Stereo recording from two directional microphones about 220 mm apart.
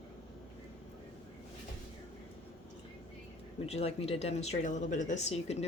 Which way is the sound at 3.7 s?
30° left (ahead or behind).